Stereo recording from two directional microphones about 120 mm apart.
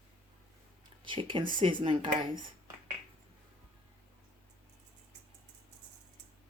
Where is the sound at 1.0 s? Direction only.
45° right (ahead or behind).